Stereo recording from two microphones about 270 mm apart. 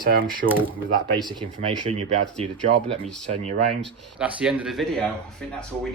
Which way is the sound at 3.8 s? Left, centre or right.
Centre.